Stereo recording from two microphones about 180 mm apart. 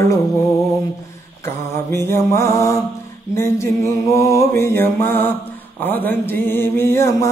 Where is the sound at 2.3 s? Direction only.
15° left (ahead or behind).